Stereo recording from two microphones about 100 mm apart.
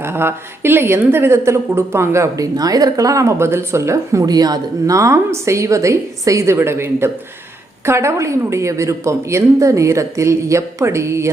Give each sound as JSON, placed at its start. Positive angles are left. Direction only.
{"t": 0.0, "sound": "speech", "side_deg": -25}